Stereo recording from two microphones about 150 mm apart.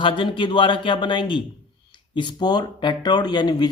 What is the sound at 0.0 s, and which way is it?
A man's voice, 35° left (ahead or behind).